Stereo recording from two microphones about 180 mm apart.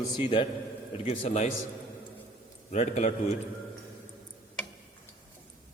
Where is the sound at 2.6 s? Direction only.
40° left (ahead or behind).